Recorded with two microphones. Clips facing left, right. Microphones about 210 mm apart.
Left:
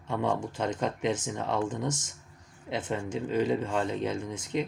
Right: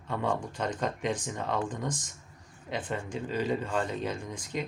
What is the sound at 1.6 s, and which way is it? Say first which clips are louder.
Speech: left 3 dB; 25° left (ahead or behind).